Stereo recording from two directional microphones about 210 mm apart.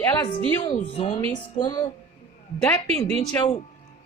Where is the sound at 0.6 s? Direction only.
30° left (ahead or behind).